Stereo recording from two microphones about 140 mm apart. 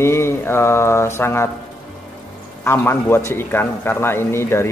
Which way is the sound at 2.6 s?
20° left (ahead or behind).